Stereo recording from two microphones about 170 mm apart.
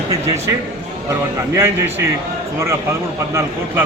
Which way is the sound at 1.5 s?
15° right (ahead or behind).